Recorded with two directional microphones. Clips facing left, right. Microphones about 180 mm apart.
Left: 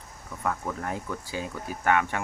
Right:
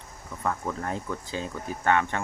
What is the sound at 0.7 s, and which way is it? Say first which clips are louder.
Speech: right 1 dB; 5° left (ahead or behind).